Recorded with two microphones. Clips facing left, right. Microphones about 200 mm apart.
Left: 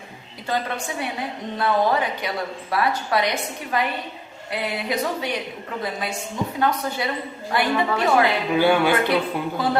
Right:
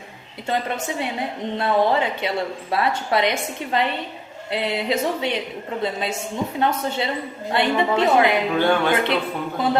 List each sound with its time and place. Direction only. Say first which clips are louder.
0.5 s a woman's voice: right 2 dB; 25° right (ahead or behind)
8.5 s speech: left 5 dB; 10° left (ahead or behind)
9.6 s a woman's voice: right 3 dB; 20° right (ahead or behind)